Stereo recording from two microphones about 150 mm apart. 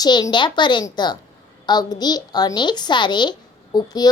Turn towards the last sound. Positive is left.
turn(degrees=25)  # may be behind; listen again after turning